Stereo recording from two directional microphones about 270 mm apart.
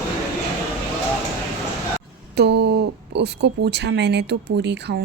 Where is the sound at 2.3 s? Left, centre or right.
Right.